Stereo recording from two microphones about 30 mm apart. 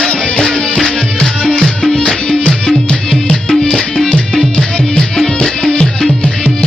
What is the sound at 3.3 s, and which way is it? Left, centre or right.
Music, centre.